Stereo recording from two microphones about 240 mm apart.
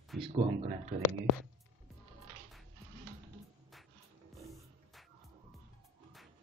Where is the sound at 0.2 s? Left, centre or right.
Right.